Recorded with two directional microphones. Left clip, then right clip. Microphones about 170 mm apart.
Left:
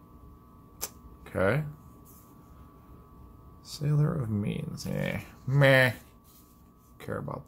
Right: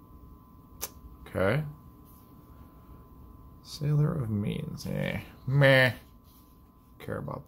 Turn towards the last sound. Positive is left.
turn(degrees=0)  # may be behind; listen again after turning